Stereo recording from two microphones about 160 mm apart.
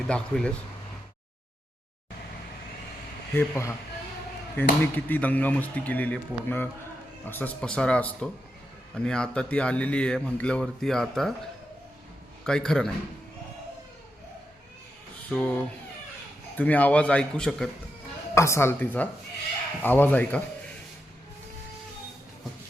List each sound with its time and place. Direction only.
0.1 s speech: 5° left (ahead or behind)
3.3 s speech: 15° left (ahead or behind)
12.5 s speech: 5° left (ahead or behind)
15.3 s speech: 10° left (ahead or behind)
18.3 s speech: 15° left (ahead or behind)